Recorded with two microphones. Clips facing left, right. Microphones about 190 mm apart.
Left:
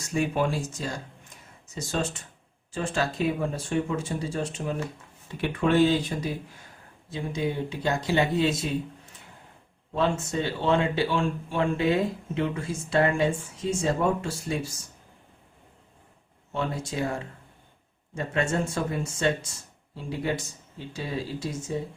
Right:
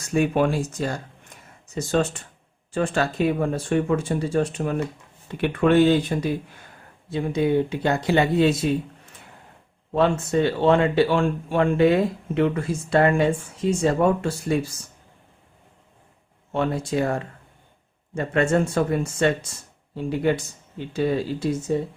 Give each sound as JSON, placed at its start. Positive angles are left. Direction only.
{"t": 0.1, "sound": "speech", "side_deg": -60}
{"t": 7.1, "sound": "speech", "side_deg": -60}
{"t": 9.9, "sound": "speech", "side_deg": -60}
{"t": 16.5, "sound": "speech", "side_deg": -60}